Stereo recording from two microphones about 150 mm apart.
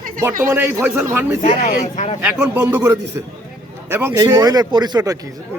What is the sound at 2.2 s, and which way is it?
A man's voice, 10° right (ahead or behind).